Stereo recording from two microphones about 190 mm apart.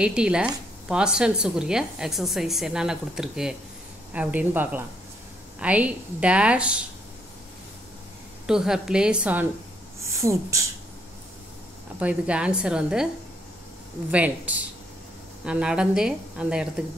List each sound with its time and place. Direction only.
0.0 s a woman's voice: 5° right (ahead or behind)
8.5 s a woman's voice: 5° right (ahead or behind)
12.0 s a woman's voice: 5° right (ahead or behind)
14.1 s a woman's voice: 10° right (ahead or behind)